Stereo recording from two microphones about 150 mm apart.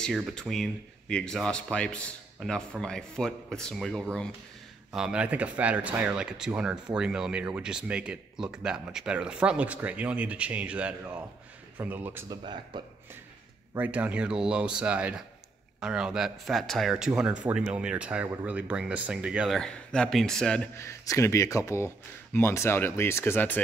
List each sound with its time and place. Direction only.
0.3 s speech: 5° left (ahead or behind); by 12.3 s 15° right (ahead or behind)
12.3 s speech: 30° right (ahead or behind)
13.7 s speech: 10° right (ahead or behind)
20.7 s speech: 20° left (ahead or behind)